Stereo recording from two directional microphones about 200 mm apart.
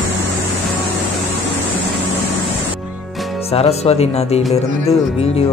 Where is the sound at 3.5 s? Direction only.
30° left (ahead or behind).